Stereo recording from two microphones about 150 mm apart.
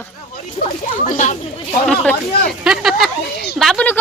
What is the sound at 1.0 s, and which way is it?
Speech, 55° left (ahead or behind).